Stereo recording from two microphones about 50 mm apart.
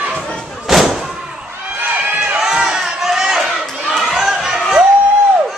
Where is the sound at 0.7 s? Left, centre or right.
Centre.